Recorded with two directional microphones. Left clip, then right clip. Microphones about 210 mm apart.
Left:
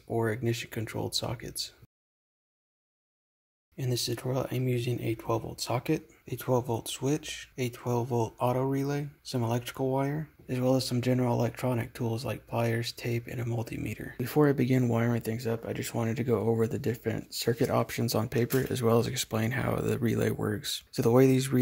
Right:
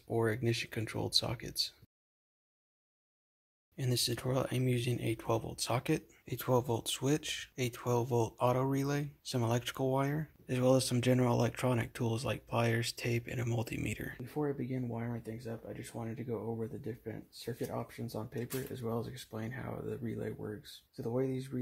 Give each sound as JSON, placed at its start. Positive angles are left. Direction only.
{"t": 0.1, "sound": "speech", "side_deg": 0}
{"t": 3.7, "sound": "speech", "side_deg": 0}
{"t": 14.2, "sound": "speech", "side_deg": 50}